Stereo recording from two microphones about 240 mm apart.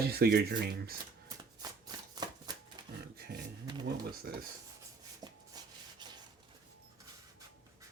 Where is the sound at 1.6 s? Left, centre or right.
Centre.